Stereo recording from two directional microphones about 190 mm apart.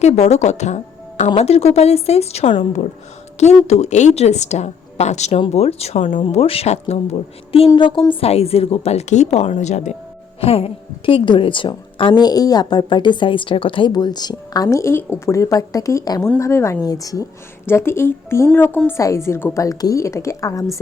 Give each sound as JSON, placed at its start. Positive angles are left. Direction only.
{"t": 0.0, "sound": "a woman's voice", "side_deg": 35}